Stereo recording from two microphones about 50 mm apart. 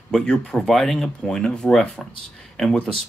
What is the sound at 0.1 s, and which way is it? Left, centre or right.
Speech, centre.